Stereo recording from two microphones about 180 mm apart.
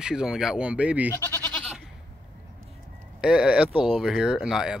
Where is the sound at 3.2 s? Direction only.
5° right (ahead or behind).